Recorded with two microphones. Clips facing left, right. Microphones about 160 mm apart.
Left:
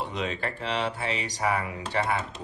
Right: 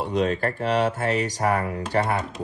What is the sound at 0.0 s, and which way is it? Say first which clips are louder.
Speech: right 8 dB; 40° right (ahead or behind).